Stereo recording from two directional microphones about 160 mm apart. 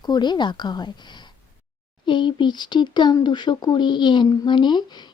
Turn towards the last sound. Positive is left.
turn(degrees=25)  # may be behind; listen again after turning